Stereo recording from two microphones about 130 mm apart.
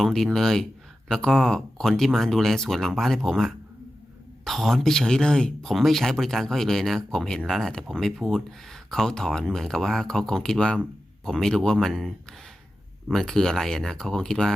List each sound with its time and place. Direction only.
0.0 s speech: 5° left (ahead or behind)